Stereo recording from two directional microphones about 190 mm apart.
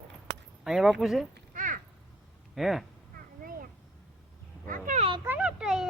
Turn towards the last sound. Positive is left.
turn(degrees=-5)  # may be behind; listen again after turning